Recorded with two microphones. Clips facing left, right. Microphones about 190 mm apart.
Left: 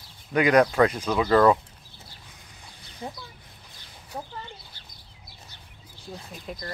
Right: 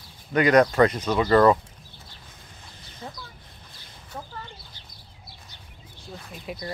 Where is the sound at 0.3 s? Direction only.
5° left (ahead or behind).